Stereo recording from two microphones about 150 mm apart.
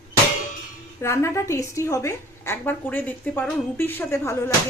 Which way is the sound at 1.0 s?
20° left (ahead or behind).